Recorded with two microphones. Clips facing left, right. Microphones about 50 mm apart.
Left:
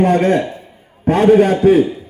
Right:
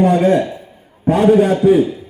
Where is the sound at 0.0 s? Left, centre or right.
Left.